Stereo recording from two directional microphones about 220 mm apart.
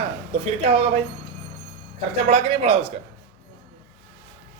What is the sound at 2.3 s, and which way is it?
Speech, 30° right (ahead or behind).